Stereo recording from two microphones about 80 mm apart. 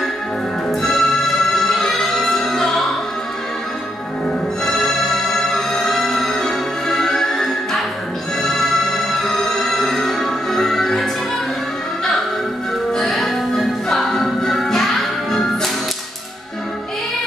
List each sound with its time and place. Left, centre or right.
0.7 s music: centre
4.6 s music: centre
12.9 s music: centre